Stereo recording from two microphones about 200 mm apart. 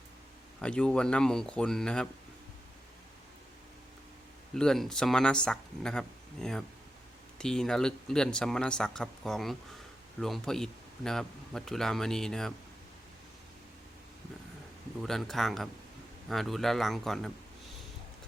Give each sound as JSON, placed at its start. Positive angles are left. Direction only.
{"t": 0.6, "sound": "speech", "side_deg": 5}
{"t": 4.5, "sound": "speech", "side_deg": 0}
{"t": 15.0, "sound": "speech", "side_deg": 0}